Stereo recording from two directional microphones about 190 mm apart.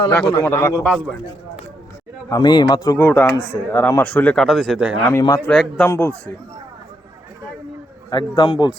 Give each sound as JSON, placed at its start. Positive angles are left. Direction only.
{"t": 0.1, "sound": "speech", "side_deg": 15}
{"t": 2.3, "sound": "speech", "side_deg": 25}
{"t": 5.2, "sound": "speech", "side_deg": 15}
{"t": 5.5, "sound": "speech", "side_deg": 5}
{"t": 8.1, "sound": "speech", "side_deg": 20}